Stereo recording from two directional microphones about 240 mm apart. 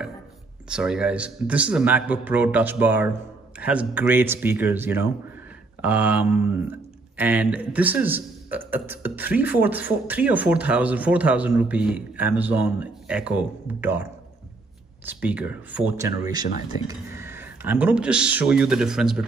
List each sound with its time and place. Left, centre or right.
0.7 s a man's voice: centre
15.0 s speech: centre